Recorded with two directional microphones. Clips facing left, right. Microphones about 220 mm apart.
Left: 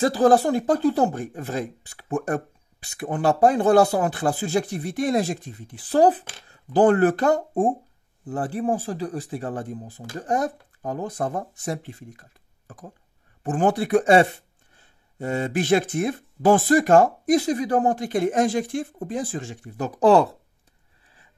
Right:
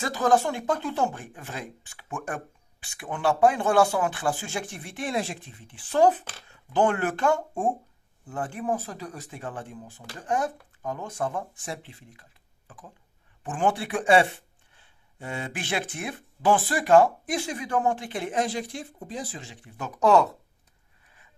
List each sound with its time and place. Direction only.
0.0 s speech: 35° left (ahead or behind)